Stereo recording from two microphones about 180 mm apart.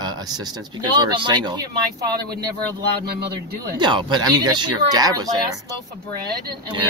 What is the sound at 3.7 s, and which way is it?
Speech, 25° right (ahead or behind).